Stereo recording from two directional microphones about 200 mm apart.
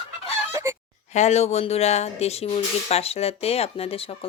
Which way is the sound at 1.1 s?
35° left (ahead or behind).